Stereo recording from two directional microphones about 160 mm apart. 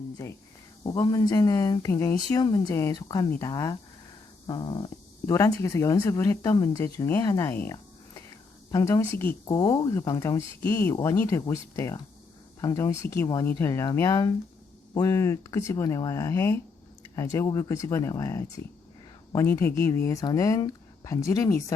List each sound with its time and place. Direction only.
0.2 s speech: 20° left (ahead or behind)